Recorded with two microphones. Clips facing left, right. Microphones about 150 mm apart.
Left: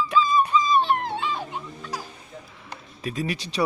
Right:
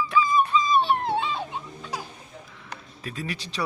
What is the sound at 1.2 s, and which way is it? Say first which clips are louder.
Music: even; 20° right (ahead or behind).